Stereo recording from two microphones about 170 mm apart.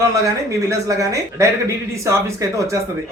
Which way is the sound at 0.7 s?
20° right (ahead or behind).